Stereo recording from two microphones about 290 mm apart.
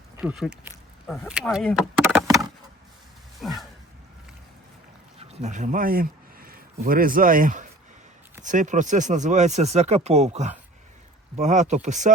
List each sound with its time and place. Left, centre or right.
0.2 s speech: centre
3.4 s a sound: centre
5.3 s speech: right